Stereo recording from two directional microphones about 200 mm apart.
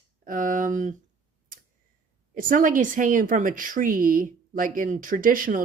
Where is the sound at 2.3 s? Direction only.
45° right (ahead or behind).